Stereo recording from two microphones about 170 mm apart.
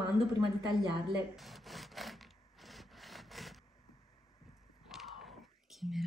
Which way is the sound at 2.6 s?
Centre (ahead or behind).